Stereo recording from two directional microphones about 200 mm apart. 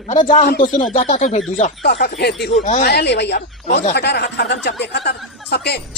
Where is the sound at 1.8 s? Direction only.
55° left (ahead or behind).